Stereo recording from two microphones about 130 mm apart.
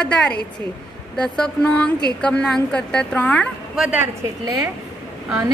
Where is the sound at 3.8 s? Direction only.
10° right (ahead or behind).